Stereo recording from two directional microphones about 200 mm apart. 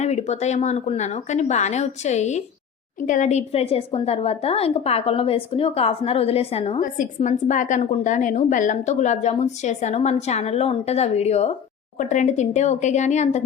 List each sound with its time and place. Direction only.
0.0 s a woman's voice: 35° left (ahead or behind)